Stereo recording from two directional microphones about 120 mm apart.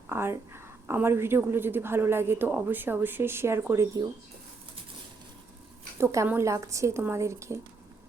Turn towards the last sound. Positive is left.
turn(degrees=-25)  # may be behind; listen again after turning